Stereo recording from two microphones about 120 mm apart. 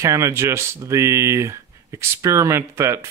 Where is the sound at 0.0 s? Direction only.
25° right (ahead or behind).